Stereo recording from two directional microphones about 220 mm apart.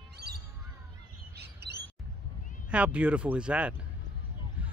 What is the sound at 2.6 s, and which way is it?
Speech, 5° right (ahead or behind).